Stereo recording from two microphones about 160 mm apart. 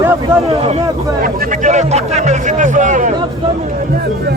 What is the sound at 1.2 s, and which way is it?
Speech, 50° right (ahead or behind).